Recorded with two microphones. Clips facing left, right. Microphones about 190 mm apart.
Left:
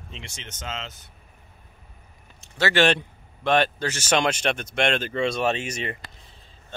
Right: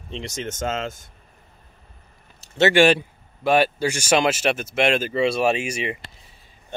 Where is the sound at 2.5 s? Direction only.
20° right (ahead or behind).